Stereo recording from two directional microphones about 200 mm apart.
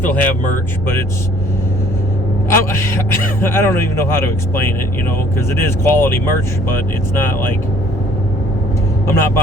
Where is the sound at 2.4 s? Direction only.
10° left (ahead or behind).